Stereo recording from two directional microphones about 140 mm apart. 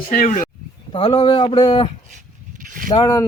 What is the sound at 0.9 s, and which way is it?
Speech, 40° left (ahead or behind).